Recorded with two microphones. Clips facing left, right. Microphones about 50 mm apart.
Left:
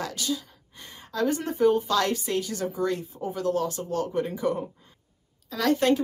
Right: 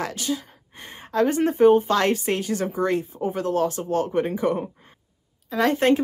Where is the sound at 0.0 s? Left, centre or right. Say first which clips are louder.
Right 3 dB; right.